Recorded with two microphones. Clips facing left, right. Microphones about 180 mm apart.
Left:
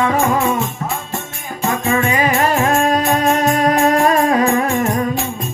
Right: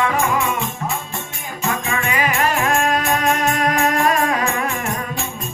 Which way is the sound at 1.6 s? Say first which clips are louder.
Left 6 dB; 35° left (ahead or behind).